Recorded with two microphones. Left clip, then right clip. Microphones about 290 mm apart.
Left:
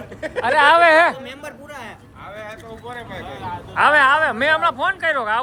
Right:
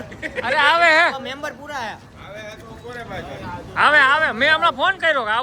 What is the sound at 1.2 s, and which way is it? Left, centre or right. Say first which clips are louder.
Speech: right 5 dB; centre.